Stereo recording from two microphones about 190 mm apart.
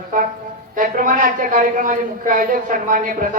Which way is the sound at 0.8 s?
45° right (ahead or behind).